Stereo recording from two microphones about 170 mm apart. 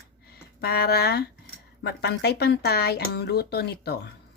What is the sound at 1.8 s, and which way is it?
A woman's voice, 75° left (ahead or behind).